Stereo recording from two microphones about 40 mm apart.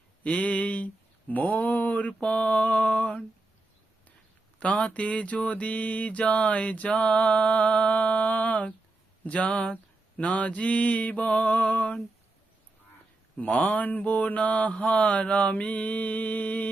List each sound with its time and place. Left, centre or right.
0.2 s mantra: left
4.6 s mantra: left
13.3 s mantra: left
13.8 s mantra: left